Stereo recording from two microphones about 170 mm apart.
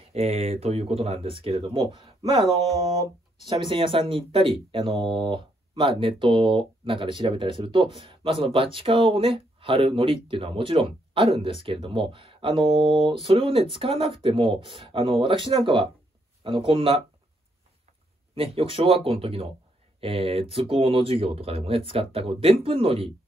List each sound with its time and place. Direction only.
0.1 s speech: 35° right (ahead or behind)
18.3 s speech: 35° right (ahead or behind)